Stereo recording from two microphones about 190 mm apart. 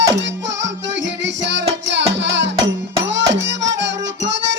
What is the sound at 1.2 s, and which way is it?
Music, 70° right (ahead or behind).